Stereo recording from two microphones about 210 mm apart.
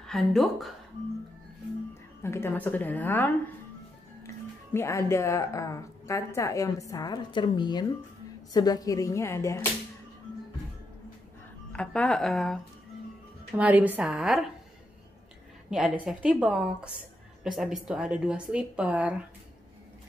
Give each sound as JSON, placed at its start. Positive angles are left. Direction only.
{"t": 0.0, "sound": "a woman's voice", "side_deg": 0}
{"t": 2.2, "sound": "a woman's voice", "side_deg": 10}
{"t": 4.7, "sound": "a woman's voice", "side_deg": 15}
{"t": 11.7, "sound": "a woman's voice", "side_deg": 5}
{"t": 13.6, "sound": "a woman's voice", "side_deg": -5}
{"t": 15.7, "sound": "a woman's voice", "side_deg": 0}